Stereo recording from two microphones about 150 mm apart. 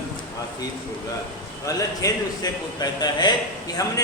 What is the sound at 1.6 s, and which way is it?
A man's voice, 25° left (ahead or behind).